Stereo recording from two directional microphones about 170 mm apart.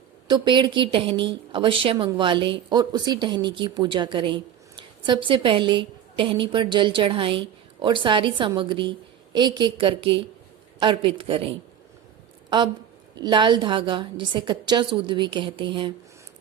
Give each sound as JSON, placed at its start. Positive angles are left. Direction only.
{"t": 0.3, "sound": "a woman's voice", "side_deg": -25}